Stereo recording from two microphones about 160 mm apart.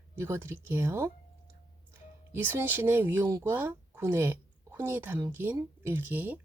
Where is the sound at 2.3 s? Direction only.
15° right (ahead or behind).